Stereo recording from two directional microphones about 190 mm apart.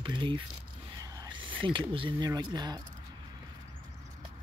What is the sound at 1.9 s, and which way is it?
Speech, 25° right (ahead or behind).